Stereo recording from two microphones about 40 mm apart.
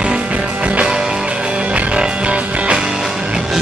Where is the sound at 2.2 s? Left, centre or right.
Right.